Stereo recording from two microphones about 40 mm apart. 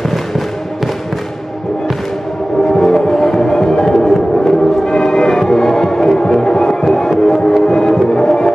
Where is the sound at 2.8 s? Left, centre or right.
Centre.